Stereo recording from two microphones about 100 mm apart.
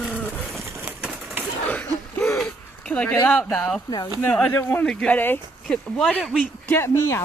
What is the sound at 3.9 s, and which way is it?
Speech, 40° left (ahead or behind).